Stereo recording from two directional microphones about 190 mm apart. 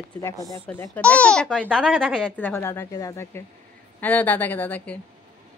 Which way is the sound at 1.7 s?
5° right (ahead or behind).